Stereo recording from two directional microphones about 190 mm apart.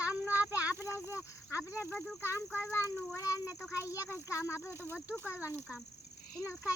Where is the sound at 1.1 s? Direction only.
15° left (ahead or behind).